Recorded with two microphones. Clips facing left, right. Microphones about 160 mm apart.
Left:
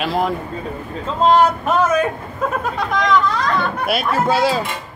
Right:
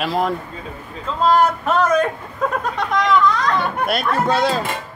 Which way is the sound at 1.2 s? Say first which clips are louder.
Left 2 dB; 25° left (ahead or behind).